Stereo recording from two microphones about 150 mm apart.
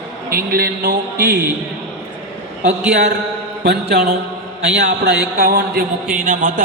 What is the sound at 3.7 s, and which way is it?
A man's voice, 90° right.